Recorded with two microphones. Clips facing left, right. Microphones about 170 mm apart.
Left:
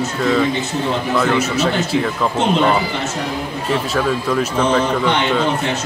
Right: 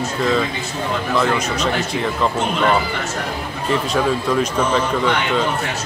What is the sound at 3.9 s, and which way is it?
Speech, centre (ahead or behind).